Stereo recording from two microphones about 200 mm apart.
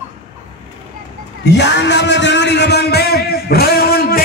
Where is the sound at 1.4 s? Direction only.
60° left (ahead or behind).